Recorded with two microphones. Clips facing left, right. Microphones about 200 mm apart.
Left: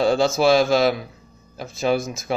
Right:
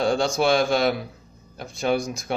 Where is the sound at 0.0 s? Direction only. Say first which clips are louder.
Left 4 dB; 5° left (ahead or behind).